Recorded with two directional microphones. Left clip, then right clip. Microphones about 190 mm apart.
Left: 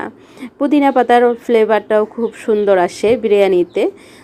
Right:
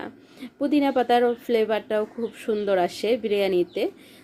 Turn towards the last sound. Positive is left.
turn(degrees=20)  # may be behind; listen again after turning